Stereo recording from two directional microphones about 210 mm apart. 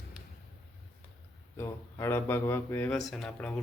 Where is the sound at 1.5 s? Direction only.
10° left (ahead or behind).